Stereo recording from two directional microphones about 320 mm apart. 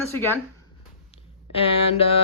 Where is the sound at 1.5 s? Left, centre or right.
Centre.